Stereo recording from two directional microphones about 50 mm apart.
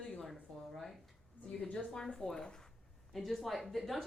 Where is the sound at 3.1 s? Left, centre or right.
Centre.